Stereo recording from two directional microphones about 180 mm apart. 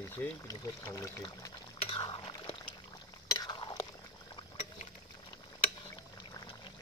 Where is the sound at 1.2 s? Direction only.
30° left (ahead or behind).